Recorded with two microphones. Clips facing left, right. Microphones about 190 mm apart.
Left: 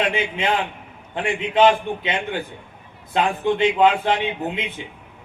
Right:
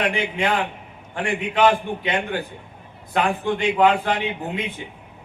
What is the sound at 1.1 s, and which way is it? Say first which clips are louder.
A man's voice: left 2 dB; 20° left (ahead or behind).